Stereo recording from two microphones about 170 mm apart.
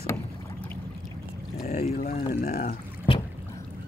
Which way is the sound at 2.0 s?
55° left (ahead or behind).